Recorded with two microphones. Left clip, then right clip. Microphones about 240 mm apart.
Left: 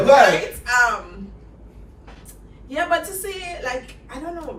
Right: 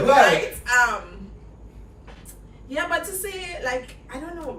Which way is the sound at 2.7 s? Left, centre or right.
Centre.